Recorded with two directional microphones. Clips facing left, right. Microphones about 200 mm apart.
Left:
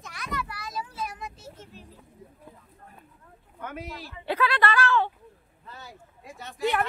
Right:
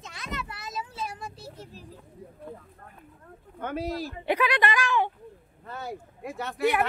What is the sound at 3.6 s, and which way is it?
Speech, 30° right (ahead or behind).